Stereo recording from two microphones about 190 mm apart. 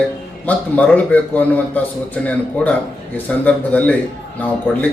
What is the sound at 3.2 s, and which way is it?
Speech, 5° left (ahead or behind).